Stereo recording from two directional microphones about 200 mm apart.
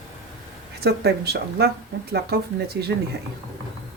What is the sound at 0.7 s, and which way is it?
Speech, 55° right (ahead or behind).